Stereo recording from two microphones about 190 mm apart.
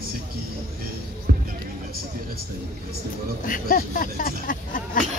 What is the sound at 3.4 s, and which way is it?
Speech, 45° left (ahead or behind).